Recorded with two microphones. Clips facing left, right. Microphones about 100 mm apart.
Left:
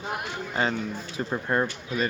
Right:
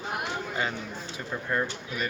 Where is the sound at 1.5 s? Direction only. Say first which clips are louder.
Left 3 dB; 40° left (ahead or behind).